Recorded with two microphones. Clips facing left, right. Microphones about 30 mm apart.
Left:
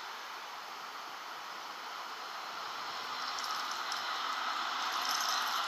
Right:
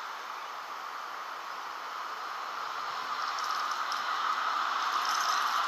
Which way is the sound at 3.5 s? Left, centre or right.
Centre.